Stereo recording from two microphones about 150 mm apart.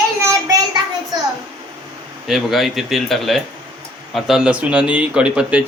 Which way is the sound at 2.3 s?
Centre (ahead or behind).